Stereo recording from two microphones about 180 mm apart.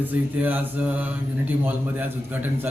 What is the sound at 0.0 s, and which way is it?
Speech, 10° right (ahead or behind).